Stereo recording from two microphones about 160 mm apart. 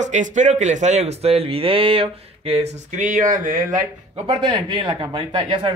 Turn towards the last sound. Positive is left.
turn(degrees=-30)  # may be behind; listen again after turning